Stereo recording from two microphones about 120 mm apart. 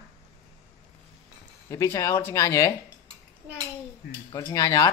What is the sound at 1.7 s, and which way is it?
Speech, 25° left (ahead or behind).